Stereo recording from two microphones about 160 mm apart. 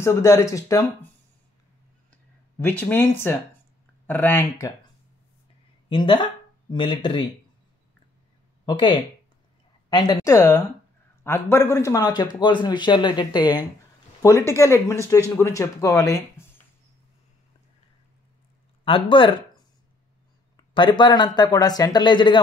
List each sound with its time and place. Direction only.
0.0 s a man's voice: 20° left (ahead or behind)
2.6 s speech: 10° left (ahead or behind)
5.9 s speech: 30° left (ahead or behind)
8.6 s a man's voice: 30° left (ahead or behind)
18.9 s speech: 35° left (ahead or behind)
20.5 s a man's voice: 30° left (ahead or behind)